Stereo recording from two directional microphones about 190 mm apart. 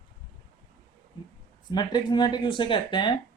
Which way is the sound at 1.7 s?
25° left (ahead or behind).